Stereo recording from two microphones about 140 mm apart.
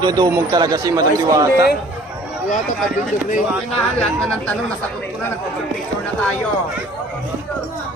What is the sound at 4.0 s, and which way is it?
Speech, 5° left (ahead or behind).